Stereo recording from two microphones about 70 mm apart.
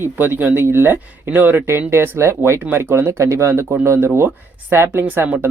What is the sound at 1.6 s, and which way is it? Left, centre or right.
Speech, right.